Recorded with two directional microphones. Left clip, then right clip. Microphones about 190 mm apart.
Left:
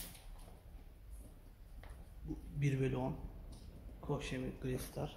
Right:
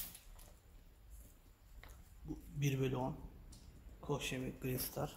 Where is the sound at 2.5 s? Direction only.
15° right (ahead or behind).